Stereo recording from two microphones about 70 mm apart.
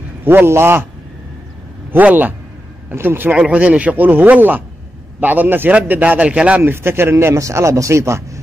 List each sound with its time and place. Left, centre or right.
0.2 s a man's voice: right
1.9 s a man's voice: right
3.3 s a man's voice: centre
6.6 s speech: right